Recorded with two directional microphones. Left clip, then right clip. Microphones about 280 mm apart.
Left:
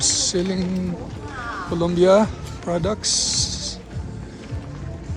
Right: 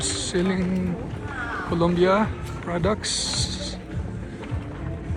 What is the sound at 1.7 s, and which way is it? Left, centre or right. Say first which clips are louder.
Speech: left 5 dB; centre.